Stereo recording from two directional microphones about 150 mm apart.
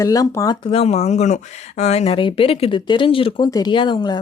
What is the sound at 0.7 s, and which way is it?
Speech, 40° left (ahead or behind).